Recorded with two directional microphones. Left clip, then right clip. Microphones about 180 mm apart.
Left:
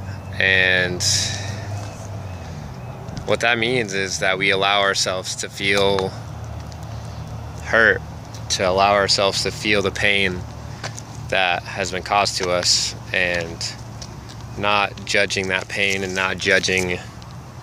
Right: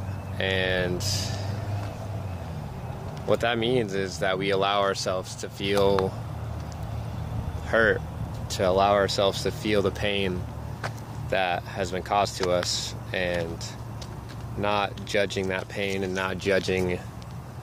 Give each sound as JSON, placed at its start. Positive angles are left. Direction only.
{"t": 0.4, "sound": "speech", "side_deg": 0}
{"t": 3.3, "sound": "speech", "side_deg": 0}
{"t": 7.6, "sound": "speech", "side_deg": 0}